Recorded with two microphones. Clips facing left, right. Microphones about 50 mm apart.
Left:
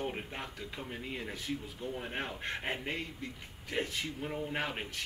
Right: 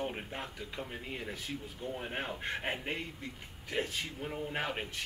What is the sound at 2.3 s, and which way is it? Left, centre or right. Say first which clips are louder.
Speech: right 1 dB; centre.